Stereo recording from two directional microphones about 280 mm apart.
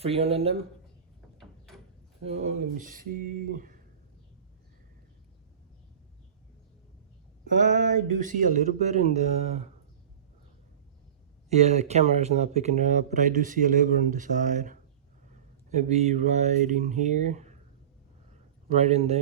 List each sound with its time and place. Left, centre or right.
0.0 s speech: right
1.4 s a sound: centre
2.2 s speech: right
7.4 s speech: right
11.4 s speech: right
18.8 s speech: right